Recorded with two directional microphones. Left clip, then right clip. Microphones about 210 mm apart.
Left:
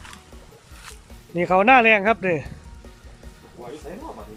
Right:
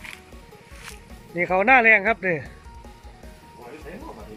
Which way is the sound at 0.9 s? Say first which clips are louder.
Left 2 dB; 5° left (ahead or behind).